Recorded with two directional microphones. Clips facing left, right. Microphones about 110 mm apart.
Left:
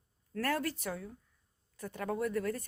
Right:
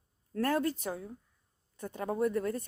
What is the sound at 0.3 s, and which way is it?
Speech, 20° right (ahead or behind).